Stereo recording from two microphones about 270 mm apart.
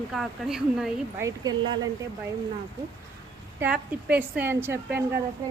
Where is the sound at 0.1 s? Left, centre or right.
Centre.